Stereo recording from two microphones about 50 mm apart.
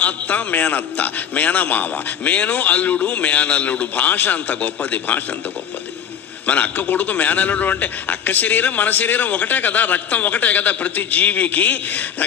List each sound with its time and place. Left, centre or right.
0.0 s a man's voice: left
6.4 s a man's voice: left